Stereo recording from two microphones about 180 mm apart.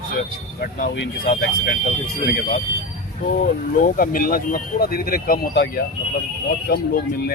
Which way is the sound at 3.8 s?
50° left (ahead or behind).